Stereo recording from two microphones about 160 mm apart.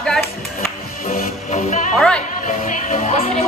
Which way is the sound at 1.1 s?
50° left (ahead or behind).